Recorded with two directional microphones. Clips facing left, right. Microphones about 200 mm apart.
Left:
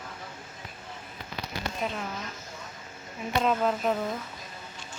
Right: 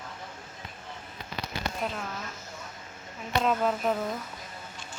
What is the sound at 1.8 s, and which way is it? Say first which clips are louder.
Speech: left 3 dB; centre (ahead or behind).